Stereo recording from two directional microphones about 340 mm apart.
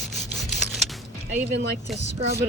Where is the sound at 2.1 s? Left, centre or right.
Centre.